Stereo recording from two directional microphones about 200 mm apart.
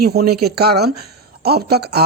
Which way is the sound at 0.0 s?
50° right (ahead or behind).